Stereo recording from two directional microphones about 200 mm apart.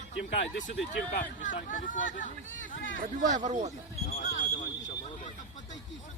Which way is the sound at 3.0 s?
35° right (ahead or behind).